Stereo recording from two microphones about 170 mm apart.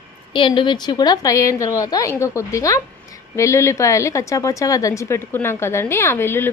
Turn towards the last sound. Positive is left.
turn(degrees=15)  # may be behind; listen again after turning